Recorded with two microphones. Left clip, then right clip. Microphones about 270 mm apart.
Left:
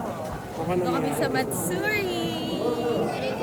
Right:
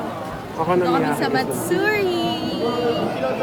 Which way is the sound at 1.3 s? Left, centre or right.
Centre.